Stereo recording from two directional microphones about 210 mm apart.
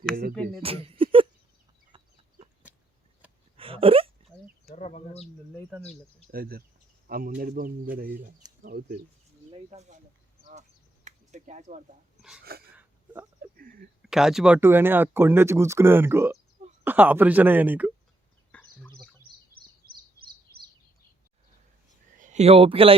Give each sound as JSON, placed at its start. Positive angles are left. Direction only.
{"t": 0.6, "sound": "a sound", "side_deg": -25}
{"t": 3.6, "sound": "a sound", "side_deg": -25}
{"t": 4.7, "sound": "speech", "side_deg": 30}
{"t": 6.3, "sound": "speech", "side_deg": -45}
{"t": 9.5, "sound": "speech", "side_deg": -30}
{"t": 10.4, "sound": "a sound", "side_deg": -35}
{"t": 12.5, "sound": "speech", "side_deg": -45}
{"t": 14.0, "sound": "speech", "side_deg": 0}
{"t": 18.5, "sound": "chicken", "side_deg": 5}
{"t": 22.2, "sound": "speech", "side_deg": -35}